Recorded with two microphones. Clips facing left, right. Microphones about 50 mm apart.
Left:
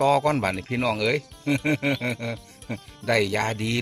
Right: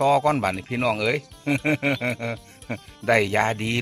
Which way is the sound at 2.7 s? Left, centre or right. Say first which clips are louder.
Right 3 dB; right.